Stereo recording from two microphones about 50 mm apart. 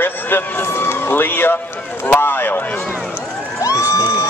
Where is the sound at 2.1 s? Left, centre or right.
Left.